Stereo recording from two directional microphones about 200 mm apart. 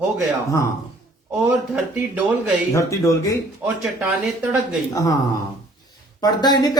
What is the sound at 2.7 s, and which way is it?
Speech, 15° left (ahead or behind).